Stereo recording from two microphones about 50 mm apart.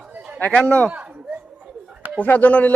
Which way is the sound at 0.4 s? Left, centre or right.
Left.